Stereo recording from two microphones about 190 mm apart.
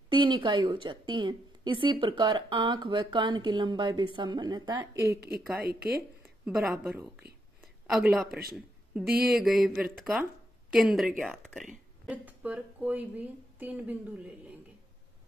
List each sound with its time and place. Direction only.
0.1 s a woman's voice: 25° right (ahead or behind)
5.1 s a woman's voice: 55° right (ahead or behind)
6.4 s a woman's voice: 10° right (ahead or behind)
8.3 s speech: 55° right (ahead or behind)
9.2 s a woman's voice: centre (ahead or behind)